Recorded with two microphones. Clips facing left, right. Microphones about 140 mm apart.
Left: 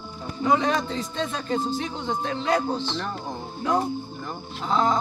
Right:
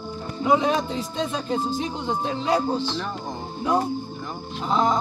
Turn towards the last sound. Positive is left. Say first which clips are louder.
# right 1 dB
turn(degrees=-15)  # may be behind; listen again after turning